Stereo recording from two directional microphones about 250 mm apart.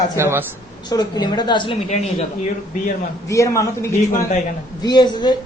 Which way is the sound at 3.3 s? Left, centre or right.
Centre.